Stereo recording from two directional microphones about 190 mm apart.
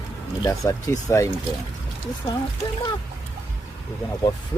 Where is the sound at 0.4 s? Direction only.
15° left (ahead or behind).